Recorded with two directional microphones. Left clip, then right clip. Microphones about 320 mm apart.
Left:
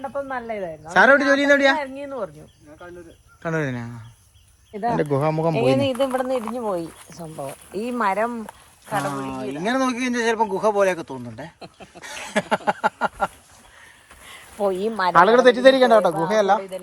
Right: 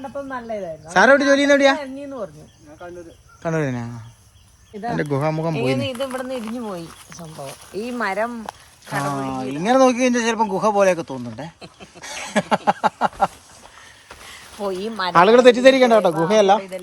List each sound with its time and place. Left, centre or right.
0.0 s a woman's voice: centre
0.9 s speech: centre
3.4 s speech: centre
5.5 s speech: left
7.8 s a woman's voice: centre
11.9 s a sound: centre
14.3 s speech: centre
15.1 s speech: centre